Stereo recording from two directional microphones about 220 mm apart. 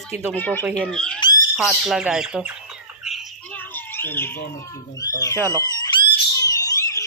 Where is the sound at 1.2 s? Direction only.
20° left (ahead or behind).